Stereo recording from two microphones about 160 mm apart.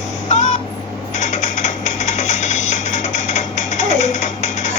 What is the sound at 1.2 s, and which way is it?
Music, 45° left (ahead or behind).